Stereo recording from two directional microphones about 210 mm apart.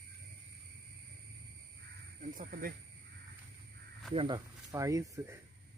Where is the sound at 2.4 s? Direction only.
45° right (ahead or behind).